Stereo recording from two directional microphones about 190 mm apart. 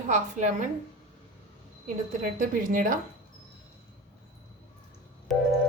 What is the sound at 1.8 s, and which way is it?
A woman's voice, 45° right (ahead or behind).